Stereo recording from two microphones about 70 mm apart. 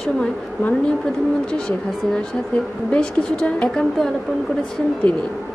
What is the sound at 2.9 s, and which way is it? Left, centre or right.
Speech, centre.